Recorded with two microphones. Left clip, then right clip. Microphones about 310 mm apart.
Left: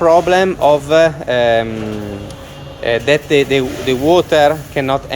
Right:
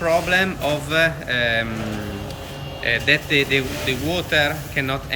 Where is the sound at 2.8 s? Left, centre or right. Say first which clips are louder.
Left 5 dB; centre.